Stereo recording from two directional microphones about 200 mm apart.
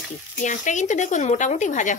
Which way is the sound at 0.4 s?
40° left (ahead or behind).